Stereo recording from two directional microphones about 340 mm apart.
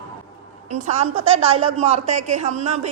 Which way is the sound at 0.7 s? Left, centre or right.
Centre.